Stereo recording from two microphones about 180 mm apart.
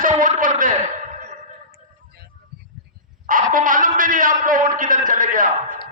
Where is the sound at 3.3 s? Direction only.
50° right (ahead or behind).